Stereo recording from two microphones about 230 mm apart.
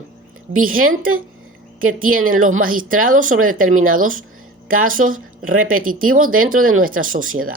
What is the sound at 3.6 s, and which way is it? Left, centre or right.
Speech, right.